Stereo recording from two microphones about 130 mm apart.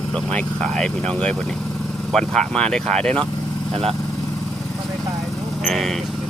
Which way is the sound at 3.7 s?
50° right (ahead or behind).